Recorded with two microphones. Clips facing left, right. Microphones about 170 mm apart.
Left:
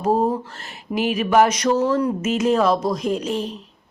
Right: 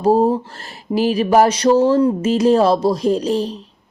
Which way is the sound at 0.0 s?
30° right (ahead or behind).